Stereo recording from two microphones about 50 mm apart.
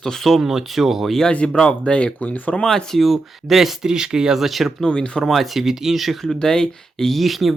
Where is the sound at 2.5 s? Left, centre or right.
Centre.